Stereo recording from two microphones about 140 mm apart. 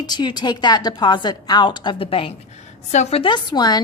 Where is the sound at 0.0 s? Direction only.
30° left (ahead or behind).